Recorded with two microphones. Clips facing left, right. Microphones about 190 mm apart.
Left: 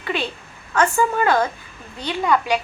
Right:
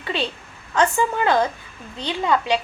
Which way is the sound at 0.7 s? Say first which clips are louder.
Left 1 dB; 20° right (ahead or behind).